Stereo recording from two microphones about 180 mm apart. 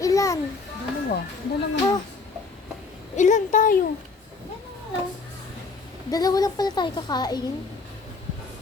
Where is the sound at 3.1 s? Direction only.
40° left (ahead or behind).